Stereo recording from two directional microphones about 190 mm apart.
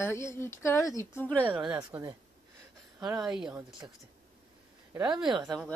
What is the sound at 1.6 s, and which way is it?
Speech, 20° right (ahead or behind).